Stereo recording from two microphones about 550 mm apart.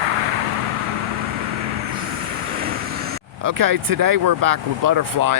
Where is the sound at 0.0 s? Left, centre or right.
Right.